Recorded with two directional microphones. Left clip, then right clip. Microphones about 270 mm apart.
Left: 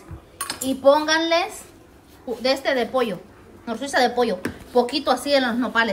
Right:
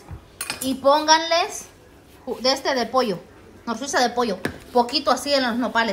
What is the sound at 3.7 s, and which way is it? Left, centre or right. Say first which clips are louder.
A woman's voice: left 2 dB; centre.